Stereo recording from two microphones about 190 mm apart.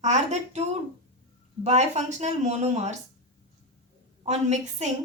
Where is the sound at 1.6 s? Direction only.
35° right (ahead or behind).